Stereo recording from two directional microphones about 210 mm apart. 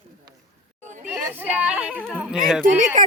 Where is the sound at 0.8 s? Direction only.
35° right (ahead or behind).